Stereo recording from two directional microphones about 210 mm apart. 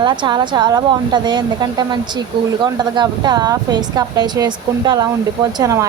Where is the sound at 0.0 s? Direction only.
20° right (ahead or behind).